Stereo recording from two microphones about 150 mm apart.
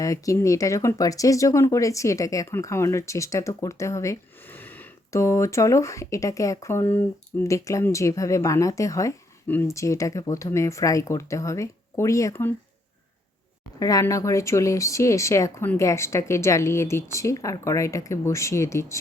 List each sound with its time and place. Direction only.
0.0 s speech: 20° left (ahead or behind)
13.7 s speech: 25° left (ahead or behind)